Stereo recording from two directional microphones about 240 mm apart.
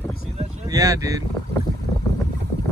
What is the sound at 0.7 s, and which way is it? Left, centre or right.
Speech, centre.